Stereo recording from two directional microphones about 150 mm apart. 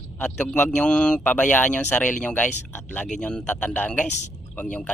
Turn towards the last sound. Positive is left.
turn(degrees=10)  # may be behind; listen again after turning